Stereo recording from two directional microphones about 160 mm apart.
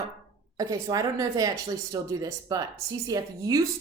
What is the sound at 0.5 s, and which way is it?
Speech, 20° right (ahead or behind).